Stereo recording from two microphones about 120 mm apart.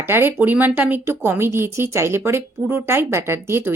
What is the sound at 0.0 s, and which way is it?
Speech, 20° right (ahead or behind).